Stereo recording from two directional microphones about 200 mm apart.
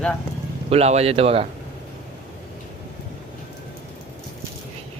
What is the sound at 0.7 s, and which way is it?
Speech, 30° right (ahead or behind).